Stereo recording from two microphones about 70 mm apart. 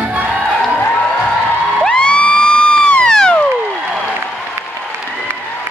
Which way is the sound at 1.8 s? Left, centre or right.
Centre.